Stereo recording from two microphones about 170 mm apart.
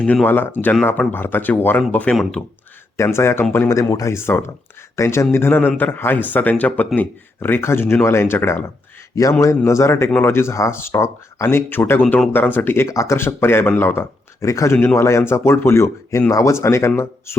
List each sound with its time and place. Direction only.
0.0 s a man's voice: 10° left (ahead or behind)